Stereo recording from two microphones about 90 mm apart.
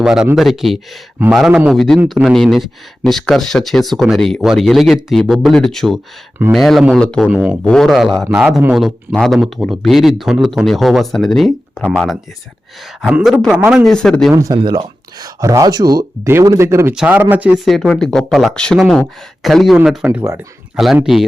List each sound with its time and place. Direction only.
0.0 s speech: 5° right (ahead or behind)
1.7 s speech: centre (ahead or behind)
7.3 s speech: 20° right (ahead or behind)
7.6 s speech: 5° left (ahead or behind); by 8.7 s 15° right (ahead or behind)
8.7 s speech: centre (ahead or behind)
13.8 s speech: 5° left (ahead or behind)
14.5 s speech: 60° right (ahead or behind)
15.2 s speech: 40° right (ahead or behind)
17.1 s speech: 20° right (ahead or behind)
17.7 s speech: 5° left (ahead or behind)